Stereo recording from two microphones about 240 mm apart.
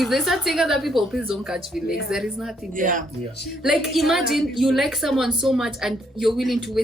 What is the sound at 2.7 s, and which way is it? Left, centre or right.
Speech, right.